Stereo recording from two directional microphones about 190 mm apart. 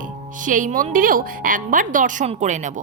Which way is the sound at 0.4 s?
45° right (ahead or behind).